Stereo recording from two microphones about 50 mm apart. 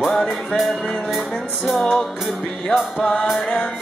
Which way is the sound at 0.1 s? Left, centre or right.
Centre.